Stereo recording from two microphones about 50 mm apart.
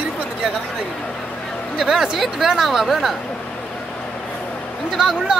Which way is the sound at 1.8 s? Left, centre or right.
Centre.